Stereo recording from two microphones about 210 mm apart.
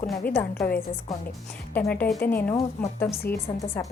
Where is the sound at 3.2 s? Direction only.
45° left (ahead or behind).